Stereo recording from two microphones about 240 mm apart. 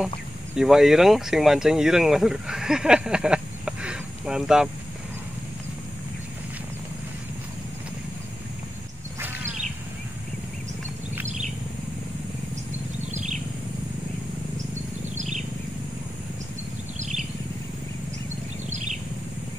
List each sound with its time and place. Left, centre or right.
0.6 s speech: centre
13.1 s bird: right
15.1 s a sound: right